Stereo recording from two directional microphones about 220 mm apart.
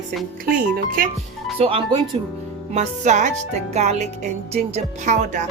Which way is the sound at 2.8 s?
35° right (ahead or behind).